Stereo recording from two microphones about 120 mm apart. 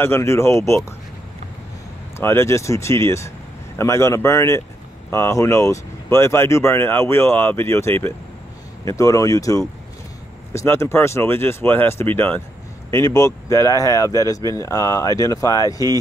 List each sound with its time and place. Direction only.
0.0 s speech: 20° left (ahead or behind)
2.1 s speech: 20° left (ahead or behind)